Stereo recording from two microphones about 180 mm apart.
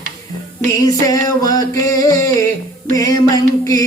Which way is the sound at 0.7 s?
20° left (ahead or behind).